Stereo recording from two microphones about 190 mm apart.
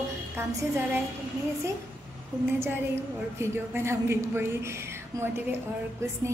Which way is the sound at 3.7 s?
15° right (ahead or behind).